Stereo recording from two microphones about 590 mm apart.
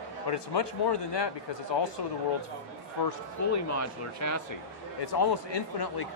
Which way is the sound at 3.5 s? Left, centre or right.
Left.